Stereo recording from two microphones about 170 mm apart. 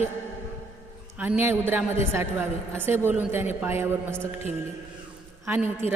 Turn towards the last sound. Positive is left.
turn(degrees=-15)  # may be behind; listen again after turning